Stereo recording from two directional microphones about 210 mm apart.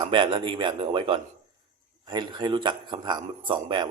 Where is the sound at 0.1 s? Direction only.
25° right (ahead or behind).